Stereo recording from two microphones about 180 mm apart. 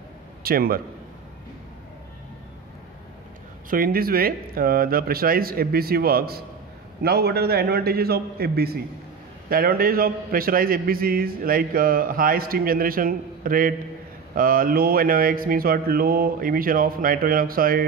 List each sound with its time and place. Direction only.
0.4 s speech: 55° right (ahead or behind)
3.7 s a man's voice: 55° right (ahead or behind)